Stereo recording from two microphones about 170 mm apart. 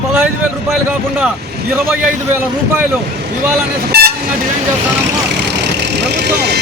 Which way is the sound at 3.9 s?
70° right (ahead or behind).